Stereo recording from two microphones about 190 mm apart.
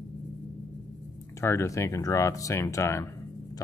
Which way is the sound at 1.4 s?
15° left (ahead or behind).